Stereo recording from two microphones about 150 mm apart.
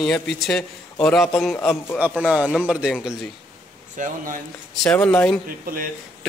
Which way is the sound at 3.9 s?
60° right (ahead or behind).